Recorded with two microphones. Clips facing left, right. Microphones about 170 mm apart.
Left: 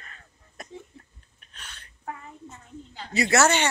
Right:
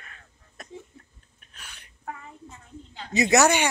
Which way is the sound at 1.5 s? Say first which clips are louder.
Left 1 dB; 10° right (ahead or behind).